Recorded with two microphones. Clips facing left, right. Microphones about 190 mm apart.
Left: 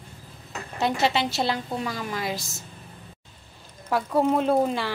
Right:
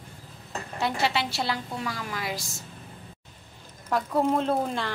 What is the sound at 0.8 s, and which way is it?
A woman's voice, 20° left (ahead or behind).